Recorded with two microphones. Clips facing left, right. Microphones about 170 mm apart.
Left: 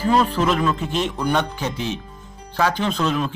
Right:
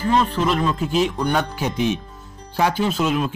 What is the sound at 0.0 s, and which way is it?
Speech, 5° left (ahead or behind).